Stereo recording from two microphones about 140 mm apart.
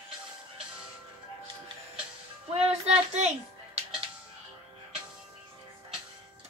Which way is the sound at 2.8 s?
50° right (ahead or behind).